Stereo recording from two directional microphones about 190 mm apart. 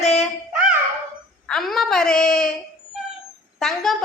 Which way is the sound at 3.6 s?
Centre (ahead or behind).